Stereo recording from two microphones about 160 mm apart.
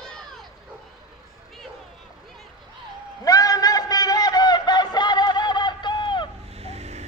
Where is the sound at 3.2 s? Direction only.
20° left (ahead or behind).